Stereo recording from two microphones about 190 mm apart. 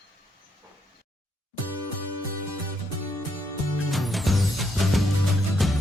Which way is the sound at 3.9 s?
Centre (ahead or behind).